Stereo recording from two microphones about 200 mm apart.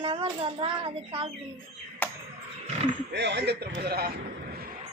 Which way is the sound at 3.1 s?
60° right (ahead or behind).